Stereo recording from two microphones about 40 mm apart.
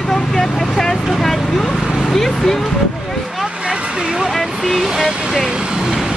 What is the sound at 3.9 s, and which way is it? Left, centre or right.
Speech, centre.